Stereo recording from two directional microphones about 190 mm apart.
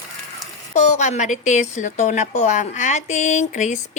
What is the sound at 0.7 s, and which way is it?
A woman's voice, 35° left (ahead or behind).